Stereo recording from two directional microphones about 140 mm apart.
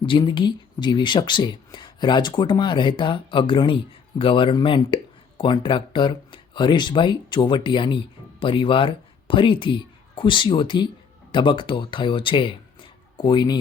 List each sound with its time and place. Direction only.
0.0 s speech: 35° left (ahead or behind)